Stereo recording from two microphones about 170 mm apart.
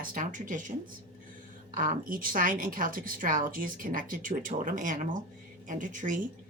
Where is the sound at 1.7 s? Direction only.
50° right (ahead or behind).